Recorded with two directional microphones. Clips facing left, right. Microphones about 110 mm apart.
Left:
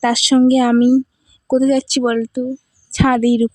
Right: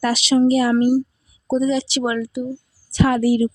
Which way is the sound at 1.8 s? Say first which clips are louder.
Left 5 dB; 55° left (ahead or behind).